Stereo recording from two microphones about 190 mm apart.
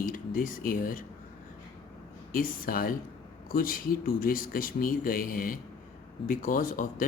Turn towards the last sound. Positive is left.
turn(degrees=45)  # may be behind; listen again after turning